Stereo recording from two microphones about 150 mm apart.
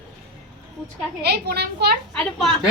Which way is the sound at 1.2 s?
90° right.